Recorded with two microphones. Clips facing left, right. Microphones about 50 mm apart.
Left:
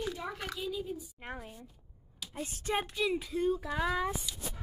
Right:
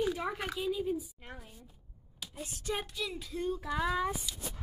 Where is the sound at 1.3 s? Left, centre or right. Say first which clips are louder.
Left 6 dB; centre.